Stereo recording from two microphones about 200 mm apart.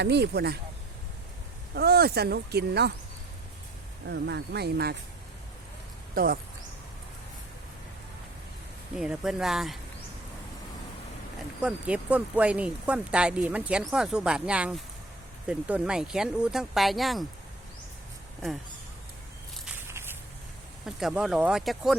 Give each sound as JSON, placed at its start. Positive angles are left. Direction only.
{"t": 0.0, "sound": "speech", "side_deg": -55}
{"t": 1.7, "sound": "speech", "side_deg": -50}
{"t": 4.1, "sound": "speech", "side_deg": -55}
{"t": 6.1, "sound": "speech", "side_deg": -45}
{"t": 9.0, "sound": "speech", "side_deg": -5}
{"t": 11.6, "sound": "speech", "side_deg": -5}
{"t": 19.6, "sound": "walk", "side_deg": -10}
{"t": 20.8, "sound": "speech", "side_deg": -5}